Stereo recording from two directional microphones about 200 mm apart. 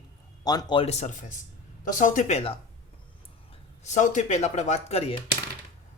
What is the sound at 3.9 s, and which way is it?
Speech, 40° left (ahead or behind).